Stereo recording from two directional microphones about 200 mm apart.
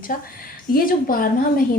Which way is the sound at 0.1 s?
45° left (ahead or behind).